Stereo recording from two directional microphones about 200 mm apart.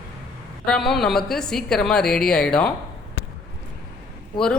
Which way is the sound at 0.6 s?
5° left (ahead or behind).